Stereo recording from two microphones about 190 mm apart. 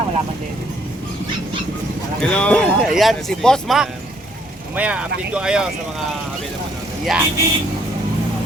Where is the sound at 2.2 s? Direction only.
5° left (ahead or behind).